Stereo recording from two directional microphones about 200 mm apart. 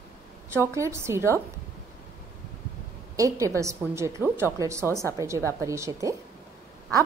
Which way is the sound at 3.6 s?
15° right (ahead or behind).